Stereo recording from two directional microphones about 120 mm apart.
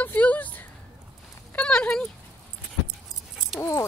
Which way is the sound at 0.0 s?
15° left (ahead or behind).